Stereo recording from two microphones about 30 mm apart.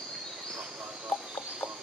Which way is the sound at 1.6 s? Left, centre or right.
Left.